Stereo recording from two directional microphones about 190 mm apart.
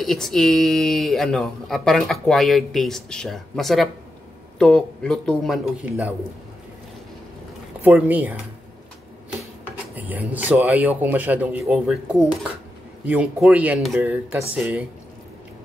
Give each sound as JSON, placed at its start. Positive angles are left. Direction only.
{"t": 0.0, "sound": "speech", "side_deg": 0}
{"t": 7.8, "sound": "speech", "side_deg": -10}
{"t": 9.9, "sound": "speech", "side_deg": -10}